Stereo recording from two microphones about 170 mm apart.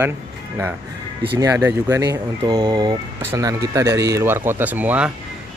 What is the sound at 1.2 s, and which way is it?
Speech, 25° right (ahead or behind).